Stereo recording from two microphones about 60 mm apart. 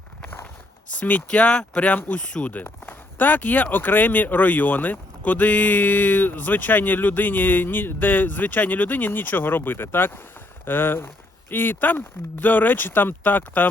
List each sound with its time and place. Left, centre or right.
0.9 s speech: left
1.9 s speech: left
2.2 s speech: centre
2.5 s speech: left